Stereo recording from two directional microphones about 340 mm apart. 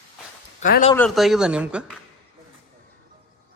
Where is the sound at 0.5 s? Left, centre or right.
Left.